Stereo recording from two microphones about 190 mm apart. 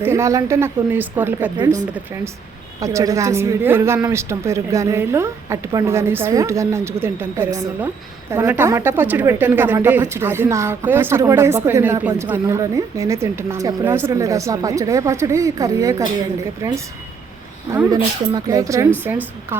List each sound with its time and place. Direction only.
0.0 s a woman's voice: 15° right (ahead or behind)
2.8 s a woman's voice: 15° right (ahead or behind)
17.7 s a woman's voice: 15° right (ahead or behind)